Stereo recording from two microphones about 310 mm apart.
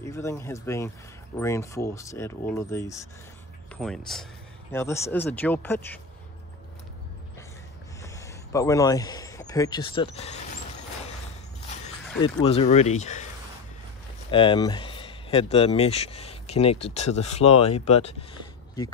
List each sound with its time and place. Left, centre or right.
0.0 s speech: centre
8.0 s a sound: centre
12.2 s speech: centre
14.3 s speech: centre